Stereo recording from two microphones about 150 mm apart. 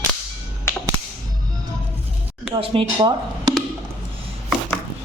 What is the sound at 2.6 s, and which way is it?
Speech, 35° right (ahead or behind).